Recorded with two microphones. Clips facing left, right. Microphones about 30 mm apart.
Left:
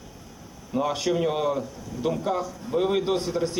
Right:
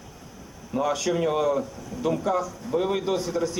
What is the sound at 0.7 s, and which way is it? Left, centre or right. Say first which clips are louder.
Speech: even; centre.